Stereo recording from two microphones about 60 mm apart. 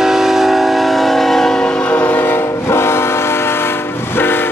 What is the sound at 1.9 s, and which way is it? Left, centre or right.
Train, left.